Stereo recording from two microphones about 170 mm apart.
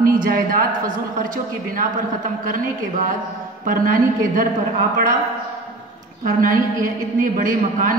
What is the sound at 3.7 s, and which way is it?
Speech, 55° right (ahead or behind).